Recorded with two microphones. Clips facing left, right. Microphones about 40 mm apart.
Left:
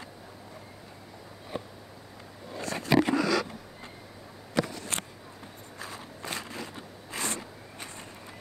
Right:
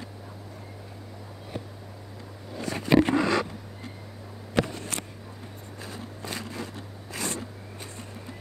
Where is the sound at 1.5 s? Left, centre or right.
Centre.